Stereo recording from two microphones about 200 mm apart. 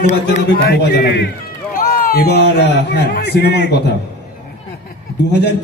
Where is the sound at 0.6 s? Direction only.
55° left (ahead or behind).